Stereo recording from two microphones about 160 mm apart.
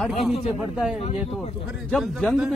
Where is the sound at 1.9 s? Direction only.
Centre (ahead or behind).